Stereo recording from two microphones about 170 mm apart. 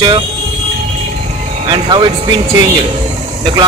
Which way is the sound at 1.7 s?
30° right (ahead or behind).